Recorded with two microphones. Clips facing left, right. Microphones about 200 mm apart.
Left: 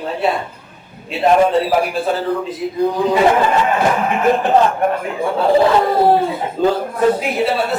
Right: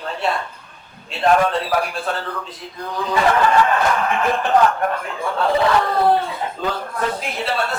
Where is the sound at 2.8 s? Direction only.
20° left (ahead or behind).